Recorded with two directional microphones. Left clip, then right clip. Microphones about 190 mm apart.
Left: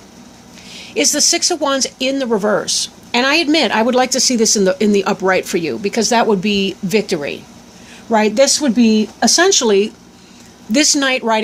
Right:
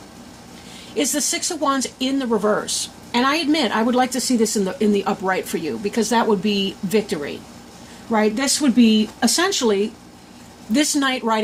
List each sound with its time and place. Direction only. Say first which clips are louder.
0.9 s speech: left 7 dB; 35° left (ahead or behind)